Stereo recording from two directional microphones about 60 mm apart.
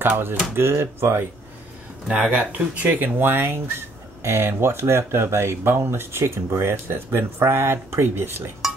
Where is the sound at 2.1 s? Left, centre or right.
Right.